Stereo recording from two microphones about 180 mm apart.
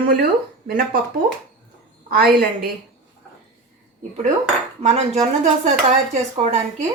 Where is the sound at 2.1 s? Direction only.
55° right (ahead or behind).